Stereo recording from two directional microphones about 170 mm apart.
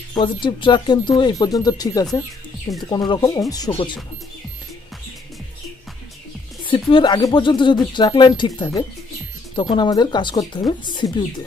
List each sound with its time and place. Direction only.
0.1 s speech: 25° left (ahead or behind)
6.6 s speech: 30° left (ahead or behind)